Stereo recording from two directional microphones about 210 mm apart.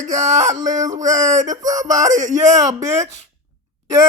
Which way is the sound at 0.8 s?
35° right (ahead or behind).